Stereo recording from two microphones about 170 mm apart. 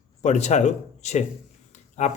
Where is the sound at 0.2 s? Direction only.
40° left (ahead or behind).